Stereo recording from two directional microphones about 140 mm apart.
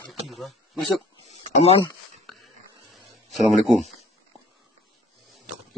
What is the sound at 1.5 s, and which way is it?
Speech, 50° left (ahead or behind).